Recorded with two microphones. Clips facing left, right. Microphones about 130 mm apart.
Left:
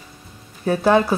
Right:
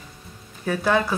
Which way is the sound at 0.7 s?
35° left (ahead or behind).